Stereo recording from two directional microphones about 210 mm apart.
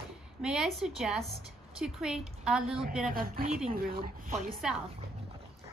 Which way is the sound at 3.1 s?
45° right (ahead or behind).